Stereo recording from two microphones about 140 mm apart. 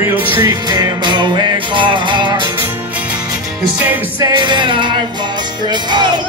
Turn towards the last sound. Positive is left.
turn(degrees=-30)  # may be behind; listen again after turning